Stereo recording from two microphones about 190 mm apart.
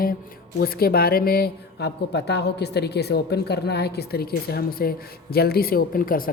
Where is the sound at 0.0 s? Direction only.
50° left (ahead or behind).